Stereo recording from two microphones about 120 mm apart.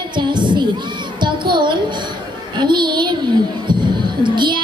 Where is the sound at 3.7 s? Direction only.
40° right (ahead or behind).